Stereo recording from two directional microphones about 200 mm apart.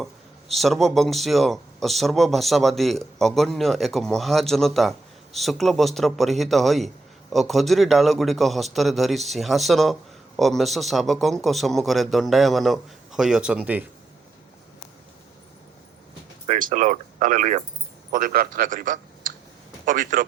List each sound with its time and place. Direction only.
0.0 s a man's voice: centre (ahead or behind)
16.5 s a man's voice: 40° right (ahead or behind)